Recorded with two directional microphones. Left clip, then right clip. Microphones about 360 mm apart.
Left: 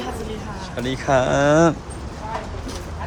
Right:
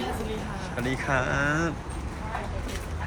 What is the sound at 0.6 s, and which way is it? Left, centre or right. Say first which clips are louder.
Speech: left 5 dB; centre.